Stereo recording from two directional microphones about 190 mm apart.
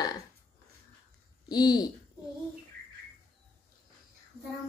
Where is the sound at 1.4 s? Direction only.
20° left (ahead or behind).